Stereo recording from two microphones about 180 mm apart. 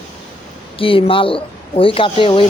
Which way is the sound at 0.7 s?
30° left (ahead or behind).